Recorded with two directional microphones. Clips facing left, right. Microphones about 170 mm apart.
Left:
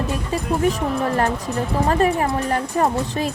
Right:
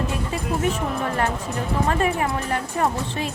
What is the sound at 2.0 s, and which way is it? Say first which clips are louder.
Speech: left 4 dB; 35° left (ahead or behind).